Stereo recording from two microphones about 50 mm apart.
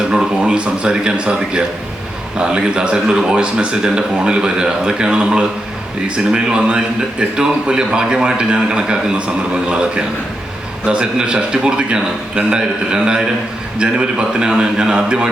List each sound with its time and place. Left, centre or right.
0.2 s a man's voice: centre